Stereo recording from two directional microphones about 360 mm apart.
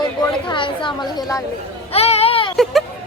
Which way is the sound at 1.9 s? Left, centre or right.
Centre.